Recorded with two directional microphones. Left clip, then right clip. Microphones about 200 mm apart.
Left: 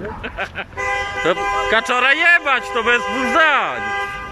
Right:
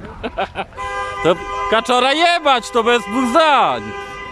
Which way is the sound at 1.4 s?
55° left (ahead or behind).